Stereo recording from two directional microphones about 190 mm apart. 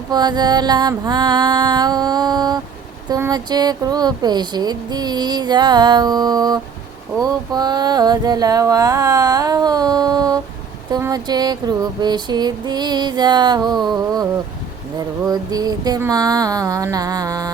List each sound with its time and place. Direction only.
0.1 s speech: 20° right (ahead or behind)